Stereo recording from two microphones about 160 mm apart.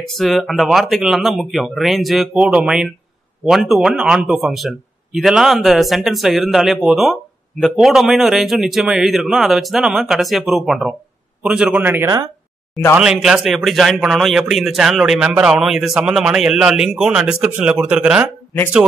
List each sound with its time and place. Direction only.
0.1 s a man's voice: centre (ahead or behind)